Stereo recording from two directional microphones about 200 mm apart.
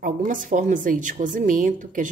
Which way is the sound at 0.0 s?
40° right (ahead or behind).